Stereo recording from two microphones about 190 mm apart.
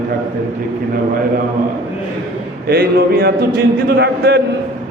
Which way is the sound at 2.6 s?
55° right (ahead or behind).